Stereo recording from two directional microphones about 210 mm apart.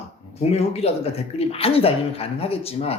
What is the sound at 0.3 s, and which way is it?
Speech, 30° left (ahead or behind).